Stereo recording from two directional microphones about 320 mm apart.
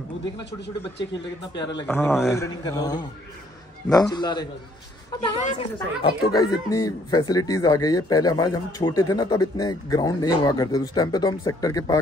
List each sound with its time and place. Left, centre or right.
0.2 s speech: left
1.6 s a woman's voice: centre
6.0 s speech: centre